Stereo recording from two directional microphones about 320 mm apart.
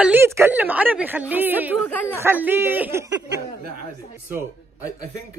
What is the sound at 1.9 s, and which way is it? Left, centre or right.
Speech, centre.